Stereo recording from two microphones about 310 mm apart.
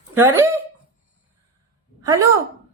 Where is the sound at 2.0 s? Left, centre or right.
Centre.